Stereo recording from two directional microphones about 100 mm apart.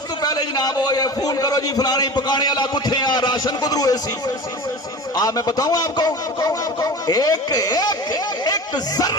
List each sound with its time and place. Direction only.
0.2 s a man's voice: 40° left (ahead or behind)
5.1 s a man's voice: 40° left (ahead or behind)